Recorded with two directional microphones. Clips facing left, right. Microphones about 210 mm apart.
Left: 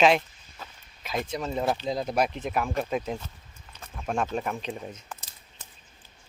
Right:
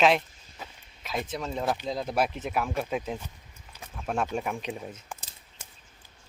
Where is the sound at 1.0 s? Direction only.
Centre (ahead or behind).